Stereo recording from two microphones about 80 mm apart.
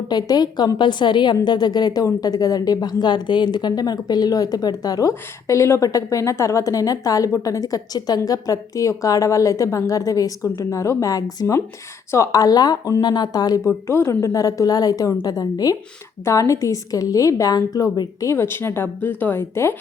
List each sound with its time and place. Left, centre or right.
0.1 s speech: left
0.8 s a woman's voice: left
1.5 s a woman's voice: left
13.7 s a woman's voice: left
18.3 s speech: left